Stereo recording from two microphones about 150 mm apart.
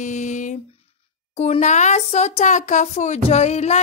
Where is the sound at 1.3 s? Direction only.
45° left (ahead or behind).